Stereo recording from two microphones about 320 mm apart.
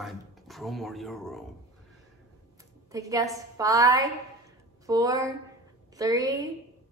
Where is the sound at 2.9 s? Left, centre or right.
Centre.